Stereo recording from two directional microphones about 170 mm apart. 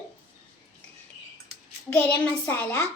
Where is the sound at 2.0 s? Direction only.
10° left (ahead or behind).